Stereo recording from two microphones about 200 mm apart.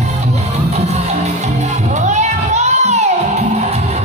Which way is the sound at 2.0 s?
35° right (ahead or behind).